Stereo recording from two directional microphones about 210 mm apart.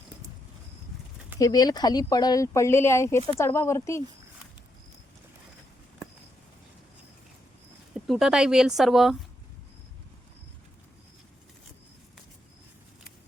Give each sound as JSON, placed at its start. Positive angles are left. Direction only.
{"t": 1.4, "sound": "speech", "side_deg": 15}
{"t": 7.9, "sound": "speech", "side_deg": 0}